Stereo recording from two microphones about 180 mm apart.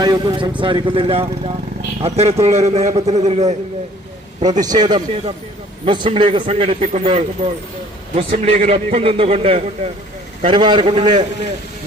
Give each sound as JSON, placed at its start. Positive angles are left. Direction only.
{"t": 0.0, "sound": "a man's voice", "side_deg": -25}
{"t": 4.6, "sound": "a man's voice", "side_deg": -20}